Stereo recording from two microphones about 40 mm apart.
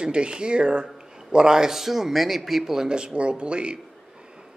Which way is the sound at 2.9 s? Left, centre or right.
Right.